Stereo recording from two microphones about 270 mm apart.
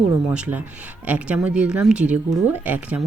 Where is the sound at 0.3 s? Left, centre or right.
Centre.